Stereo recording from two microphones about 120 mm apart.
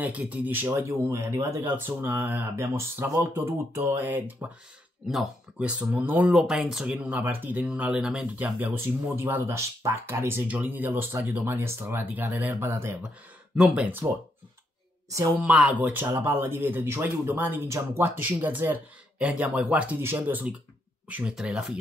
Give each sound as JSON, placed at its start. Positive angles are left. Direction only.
{"t": 0.0, "sound": "speech", "side_deg": -10}
{"t": 6.3, "sound": "speech", "side_deg": -5}
{"t": 13.6, "sound": "speech", "side_deg": -5}
{"t": 15.3, "sound": "speech", "side_deg": -5}